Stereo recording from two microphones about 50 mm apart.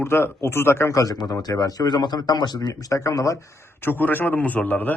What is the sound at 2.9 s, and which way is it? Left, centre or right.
Speech, left.